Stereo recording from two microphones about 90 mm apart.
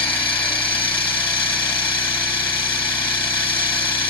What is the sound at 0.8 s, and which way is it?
Vehicle, 65° left (ahead or behind).